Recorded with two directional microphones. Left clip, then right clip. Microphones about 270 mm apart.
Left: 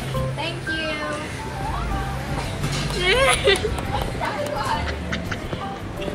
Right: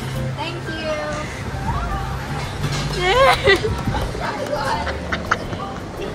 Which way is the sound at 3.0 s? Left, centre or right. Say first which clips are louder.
Right 4 dB; right.